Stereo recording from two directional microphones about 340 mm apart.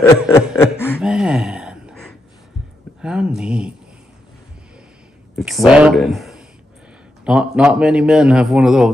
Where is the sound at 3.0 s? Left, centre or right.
Centre.